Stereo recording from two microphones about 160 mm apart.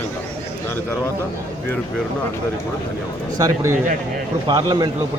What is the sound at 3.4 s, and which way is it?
A man's voice, 20° right (ahead or behind).